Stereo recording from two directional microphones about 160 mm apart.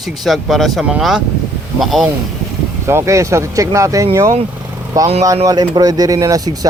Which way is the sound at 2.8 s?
15° right (ahead or behind).